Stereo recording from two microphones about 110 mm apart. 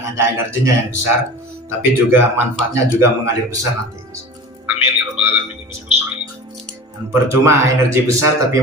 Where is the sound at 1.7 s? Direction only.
20° right (ahead or behind).